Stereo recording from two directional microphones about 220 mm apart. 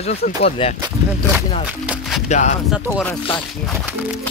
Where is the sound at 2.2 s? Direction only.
30° left (ahead or behind).